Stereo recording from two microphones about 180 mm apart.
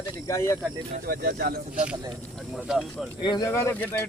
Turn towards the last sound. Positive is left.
turn(degrees=10)  # may be behind; listen again after turning